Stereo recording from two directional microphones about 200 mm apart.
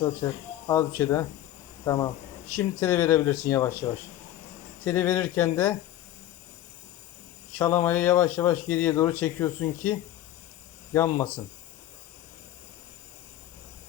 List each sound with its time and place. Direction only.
0.2 s speech: 15° left (ahead or behind)
4.9 s speech: 10° left (ahead or behind)
7.6 s speech: 10° left (ahead or behind)
10.9 s speech: 15° left (ahead or behind)